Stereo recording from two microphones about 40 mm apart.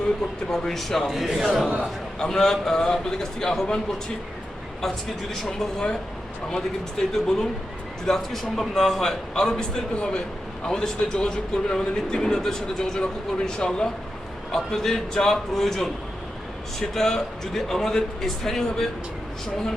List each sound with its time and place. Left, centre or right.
0.5 s speech: centre
2.1 s a man's voice: centre
5.5 s speech: centre
7.0 s a man's voice: centre